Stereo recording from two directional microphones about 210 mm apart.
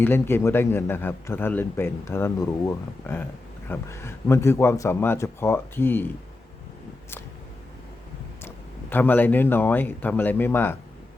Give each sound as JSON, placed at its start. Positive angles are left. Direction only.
{"t": 0.0, "sound": "speech", "side_deg": 10}
{"t": 8.4, "sound": "speech", "side_deg": 10}